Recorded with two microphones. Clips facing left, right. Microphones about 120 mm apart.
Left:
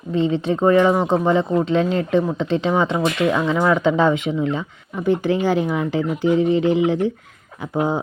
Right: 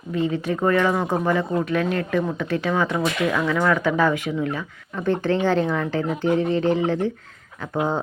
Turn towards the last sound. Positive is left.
turn(degrees=15)  # may be behind; listen again after turning